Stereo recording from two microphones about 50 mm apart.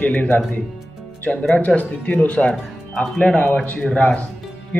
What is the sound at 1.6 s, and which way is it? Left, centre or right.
Speech, left.